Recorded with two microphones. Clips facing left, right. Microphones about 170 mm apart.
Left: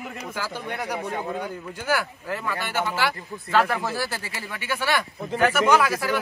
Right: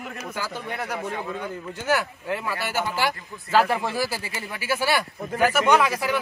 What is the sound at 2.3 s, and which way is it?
Speech, 10° right (ahead or behind).